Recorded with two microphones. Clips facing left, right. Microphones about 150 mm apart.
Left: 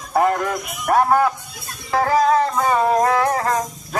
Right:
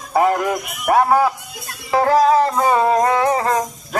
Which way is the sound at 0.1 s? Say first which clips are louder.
Right 2 dB; 5° right (ahead or behind).